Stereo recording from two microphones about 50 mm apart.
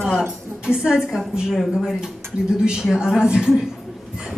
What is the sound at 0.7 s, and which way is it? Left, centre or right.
Speech, centre.